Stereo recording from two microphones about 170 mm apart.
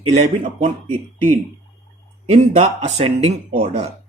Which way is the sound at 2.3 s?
40° right (ahead or behind).